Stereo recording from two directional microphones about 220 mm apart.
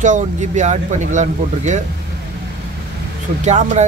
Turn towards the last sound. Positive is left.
turn(degrees=-30)  # may be behind; listen again after turning